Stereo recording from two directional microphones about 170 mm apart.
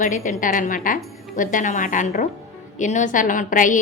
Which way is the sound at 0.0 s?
50° left (ahead or behind).